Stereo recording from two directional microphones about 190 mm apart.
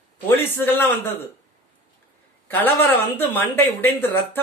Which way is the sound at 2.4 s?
10° left (ahead or behind).